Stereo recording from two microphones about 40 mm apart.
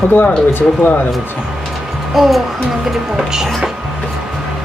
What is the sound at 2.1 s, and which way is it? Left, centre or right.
A woman's voice, centre.